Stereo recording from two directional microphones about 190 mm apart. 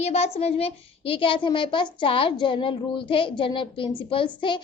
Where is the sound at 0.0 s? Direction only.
35° left (ahead or behind).